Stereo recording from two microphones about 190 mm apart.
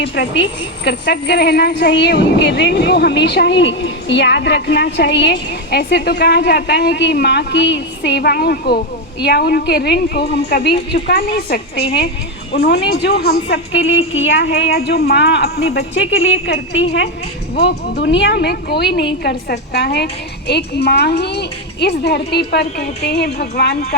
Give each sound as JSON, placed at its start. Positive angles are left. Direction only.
{"t": 0.0, "sound": "a woman's voice", "side_deg": 70}
{"t": 12.6, "sound": "a woman's voice", "side_deg": 60}
{"t": 16.5, "sound": "speech", "side_deg": 70}
{"t": 17.5, "sound": "a woman's voice", "side_deg": 60}